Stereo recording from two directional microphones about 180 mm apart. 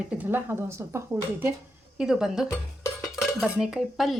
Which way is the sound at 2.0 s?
5° right (ahead or behind).